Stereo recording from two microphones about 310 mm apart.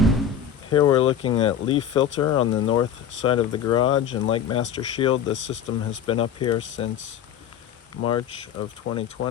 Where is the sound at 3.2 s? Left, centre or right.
Centre.